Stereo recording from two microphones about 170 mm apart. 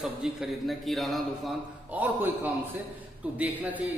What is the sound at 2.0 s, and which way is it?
A man's voice, 10° right (ahead or behind).